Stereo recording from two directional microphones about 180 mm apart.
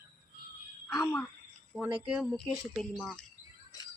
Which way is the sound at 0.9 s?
20° left (ahead or behind).